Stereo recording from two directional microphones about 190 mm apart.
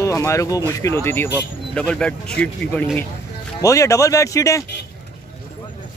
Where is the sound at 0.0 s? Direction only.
15° left (ahead or behind).